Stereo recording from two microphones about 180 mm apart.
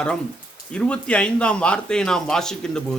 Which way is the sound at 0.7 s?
5° left (ahead or behind).